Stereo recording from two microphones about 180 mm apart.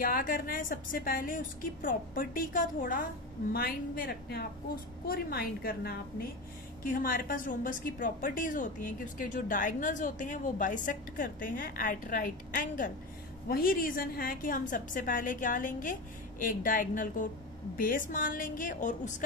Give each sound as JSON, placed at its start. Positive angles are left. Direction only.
{"t": 0.0, "sound": "a woman's voice", "side_deg": 50}